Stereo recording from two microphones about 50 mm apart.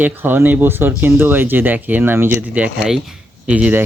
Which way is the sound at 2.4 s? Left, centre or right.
Right.